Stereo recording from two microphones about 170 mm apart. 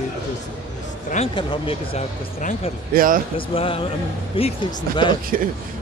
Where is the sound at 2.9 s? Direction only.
55° right (ahead or behind).